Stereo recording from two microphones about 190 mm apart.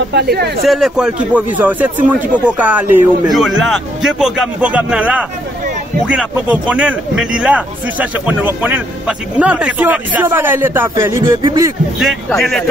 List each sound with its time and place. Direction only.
0.1 s speech: 60° right (ahead or behind)
0.7 s a man's voice: centre (ahead or behind); by 11.7 s 15° right (ahead or behind)
12.0 s a man's voice: centre (ahead or behind)